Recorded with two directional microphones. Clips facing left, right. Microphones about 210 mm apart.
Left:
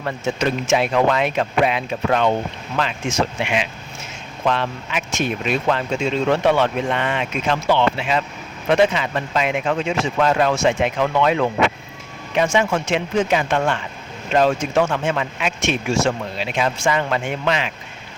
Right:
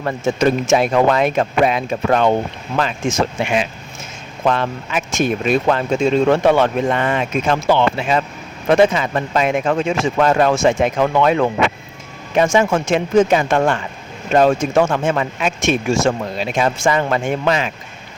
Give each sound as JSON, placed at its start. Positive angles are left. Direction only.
{"t": 0.0, "sound": "speech", "side_deg": -45}